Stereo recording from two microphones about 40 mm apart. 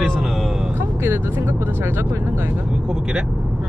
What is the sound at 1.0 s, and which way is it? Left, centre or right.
Speech, right.